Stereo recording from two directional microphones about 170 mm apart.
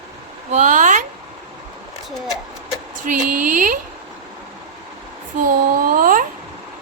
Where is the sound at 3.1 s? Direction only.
50° right (ahead or behind).